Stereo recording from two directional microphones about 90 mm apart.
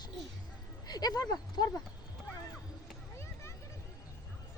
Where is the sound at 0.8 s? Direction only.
50° left (ahead or behind).